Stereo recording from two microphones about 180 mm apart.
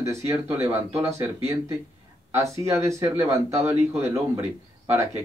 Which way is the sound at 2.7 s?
15° right (ahead or behind).